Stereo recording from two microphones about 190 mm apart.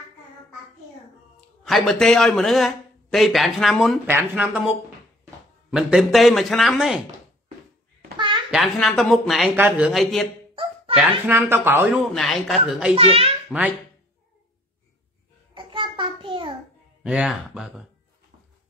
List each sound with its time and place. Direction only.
1.6 s a man's voice: centre (ahead or behind)
4.0 s speech: 10° right (ahead or behind)
5.7 s a man's voice: 5° right (ahead or behind)
8.2 s a sound: 25° right (ahead or behind)
8.5 s a man's voice: centre (ahead or behind)
12.1 s a man's voice: centre (ahead or behind)
12.9 s a child's voice: 30° right (ahead or behind)
13.5 s speech: 10° right (ahead or behind)
15.5 s a sound: 25° right (ahead or behind)
17.0 s a man's voice: 5° right (ahead or behind)